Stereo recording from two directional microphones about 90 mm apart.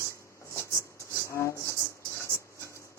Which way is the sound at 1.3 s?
30° left (ahead or behind).